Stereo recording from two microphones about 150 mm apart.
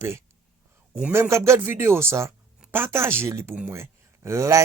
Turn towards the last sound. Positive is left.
turn(degrees=-20)  # may be behind; listen again after turning